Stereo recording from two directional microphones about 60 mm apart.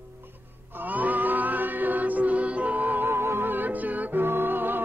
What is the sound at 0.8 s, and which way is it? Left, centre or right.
Music, right.